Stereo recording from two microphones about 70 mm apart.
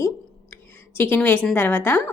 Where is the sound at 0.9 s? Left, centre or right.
Left.